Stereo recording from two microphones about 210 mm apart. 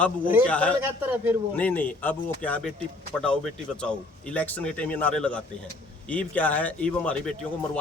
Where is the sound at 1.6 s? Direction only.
5° left (ahead or behind).